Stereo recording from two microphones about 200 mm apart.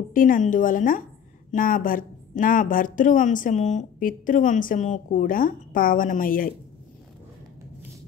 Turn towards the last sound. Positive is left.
turn(degrees=45)  # may be behind; listen again after turning